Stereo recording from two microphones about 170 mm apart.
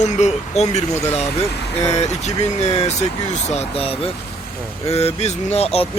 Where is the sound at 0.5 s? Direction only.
40° left (ahead or behind).